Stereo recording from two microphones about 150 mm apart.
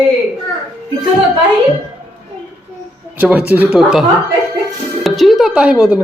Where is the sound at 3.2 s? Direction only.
10° right (ahead or behind).